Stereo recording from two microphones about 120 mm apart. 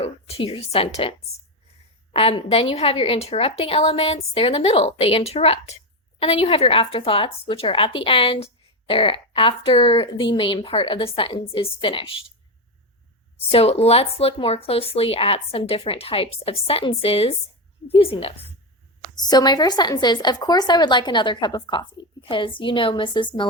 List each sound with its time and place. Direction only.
0.0 s a woman's voice: 55° left (ahead or behind)
2.1 s a woman's voice: 55° left (ahead or behind)
13.5 s speech: 55° left (ahead or behind)
19.1 s a woman's voice: 35° left (ahead or behind)